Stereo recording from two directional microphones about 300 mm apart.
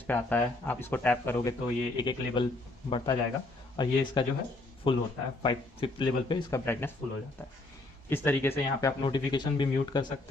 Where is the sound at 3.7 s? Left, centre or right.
Centre.